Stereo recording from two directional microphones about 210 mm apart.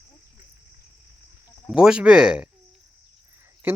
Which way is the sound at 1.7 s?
5° right (ahead or behind).